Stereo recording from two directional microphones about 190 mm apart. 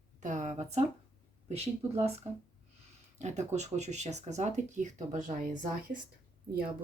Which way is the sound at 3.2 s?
35° right (ahead or behind).